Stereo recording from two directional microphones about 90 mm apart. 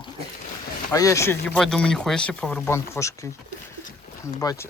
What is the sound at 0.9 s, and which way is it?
Speech, 35° left (ahead or behind).